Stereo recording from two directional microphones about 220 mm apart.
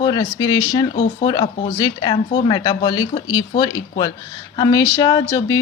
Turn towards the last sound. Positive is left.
turn(degrees=15)  # may be behind; listen again after turning